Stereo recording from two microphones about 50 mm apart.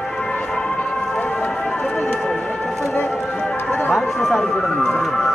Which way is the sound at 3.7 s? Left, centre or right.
Left.